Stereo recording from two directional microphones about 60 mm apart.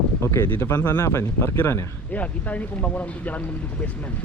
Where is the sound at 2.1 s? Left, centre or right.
Left.